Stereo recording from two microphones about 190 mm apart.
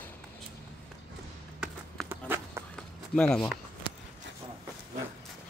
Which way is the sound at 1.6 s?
5° right (ahead or behind).